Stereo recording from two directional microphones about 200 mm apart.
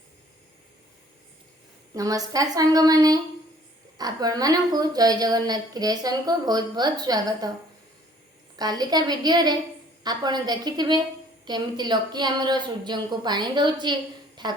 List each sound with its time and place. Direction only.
1.9 s a woman's voice: 15° right (ahead or behind)
8.5 s a woman's voice: 20° right (ahead or behind)